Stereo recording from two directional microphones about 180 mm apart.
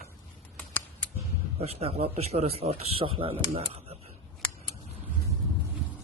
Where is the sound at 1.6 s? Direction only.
35° right (ahead or behind).